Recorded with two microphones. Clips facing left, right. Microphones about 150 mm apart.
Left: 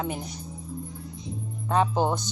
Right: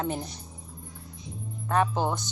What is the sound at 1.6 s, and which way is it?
Speech, 15° left (ahead or behind).